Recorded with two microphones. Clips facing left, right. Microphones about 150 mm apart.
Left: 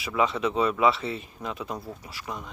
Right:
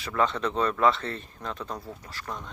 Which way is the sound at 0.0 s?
10° left (ahead or behind).